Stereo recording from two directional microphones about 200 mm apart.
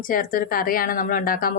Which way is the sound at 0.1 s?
45° left (ahead or behind).